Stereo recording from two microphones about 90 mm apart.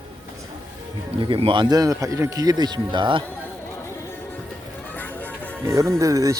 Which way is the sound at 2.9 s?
65° right (ahead or behind).